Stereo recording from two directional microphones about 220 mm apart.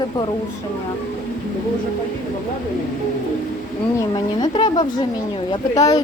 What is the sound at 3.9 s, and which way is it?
A woman's voice, 20° left (ahead or behind).